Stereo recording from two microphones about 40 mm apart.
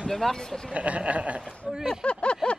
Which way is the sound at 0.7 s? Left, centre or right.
Right.